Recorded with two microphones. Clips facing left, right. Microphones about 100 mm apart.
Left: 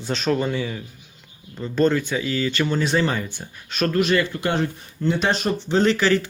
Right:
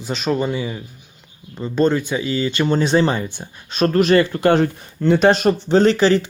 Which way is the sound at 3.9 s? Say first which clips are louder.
Right 6 dB; 40° right (ahead or behind).